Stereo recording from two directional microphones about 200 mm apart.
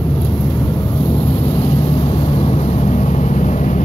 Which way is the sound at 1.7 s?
20° left (ahead or behind).